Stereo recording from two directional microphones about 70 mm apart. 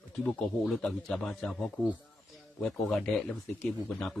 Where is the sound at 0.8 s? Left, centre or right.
Centre.